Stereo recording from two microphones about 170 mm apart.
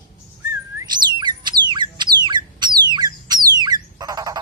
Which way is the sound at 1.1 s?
25° right (ahead or behind).